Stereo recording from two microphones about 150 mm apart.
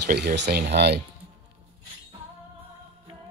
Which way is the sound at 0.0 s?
90° right.